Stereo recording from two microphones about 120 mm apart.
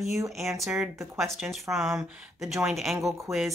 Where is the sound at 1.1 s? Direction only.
Centre (ahead or behind).